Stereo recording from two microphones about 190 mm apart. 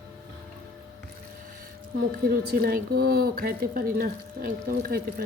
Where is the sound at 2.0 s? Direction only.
50° right (ahead or behind).